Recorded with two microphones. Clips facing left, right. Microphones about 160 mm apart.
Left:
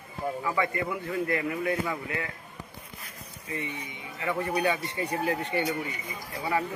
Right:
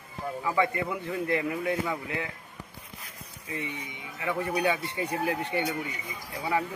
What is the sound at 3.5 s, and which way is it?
Speech, 15° right (ahead or behind).